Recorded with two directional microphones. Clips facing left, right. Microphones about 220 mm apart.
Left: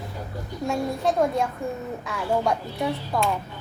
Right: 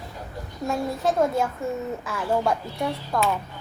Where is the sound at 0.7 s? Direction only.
Centre (ahead or behind).